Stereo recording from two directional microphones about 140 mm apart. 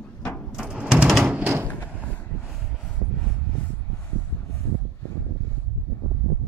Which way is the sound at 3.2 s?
10° left (ahead or behind).